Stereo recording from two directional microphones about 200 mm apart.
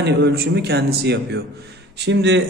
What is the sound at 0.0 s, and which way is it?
A man's voice, 55° right (ahead or behind).